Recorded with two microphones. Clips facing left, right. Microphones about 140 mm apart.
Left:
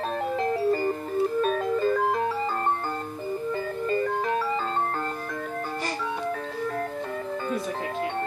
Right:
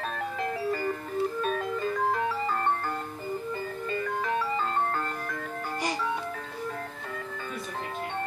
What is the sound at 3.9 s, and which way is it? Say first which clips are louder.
Music: left 5 dB; 35° left (ahead or behind).